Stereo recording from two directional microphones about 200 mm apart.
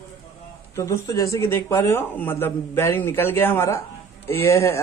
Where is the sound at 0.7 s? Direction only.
15° left (ahead or behind).